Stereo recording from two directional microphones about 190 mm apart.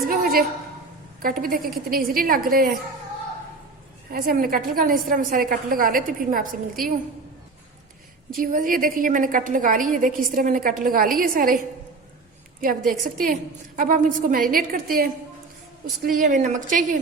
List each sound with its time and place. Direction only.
0.1 s a woman's voice: 50° right (ahead or behind)
4.1 s a woman's voice: 50° right (ahead or behind)
8.3 s a woman's voice: 45° right (ahead or behind)
12.9 s a woman's voice: 45° right (ahead or behind)